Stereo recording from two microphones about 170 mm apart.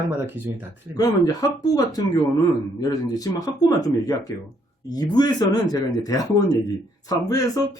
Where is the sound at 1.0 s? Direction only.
20° left (ahead or behind).